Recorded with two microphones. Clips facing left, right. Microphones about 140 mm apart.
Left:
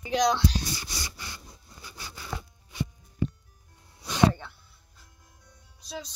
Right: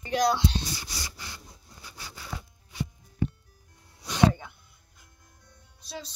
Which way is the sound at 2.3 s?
90° left.